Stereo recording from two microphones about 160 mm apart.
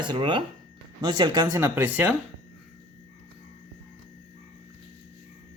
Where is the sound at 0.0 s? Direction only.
30° right (ahead or behind).